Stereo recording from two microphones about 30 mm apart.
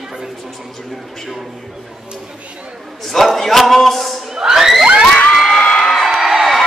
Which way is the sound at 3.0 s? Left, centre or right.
Centre.